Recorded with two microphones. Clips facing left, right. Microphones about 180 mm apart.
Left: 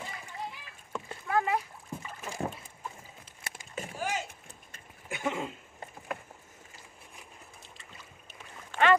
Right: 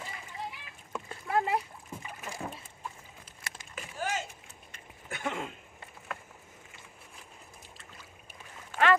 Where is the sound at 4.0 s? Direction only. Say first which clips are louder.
Right 1 dB; 15° left (ahead or behind).